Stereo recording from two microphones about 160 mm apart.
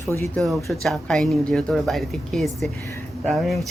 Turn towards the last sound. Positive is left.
turn(degrees=0)  # may be behind; listen again after turning